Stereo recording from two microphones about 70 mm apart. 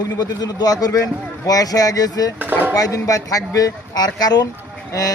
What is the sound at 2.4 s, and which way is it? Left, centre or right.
Speech, right.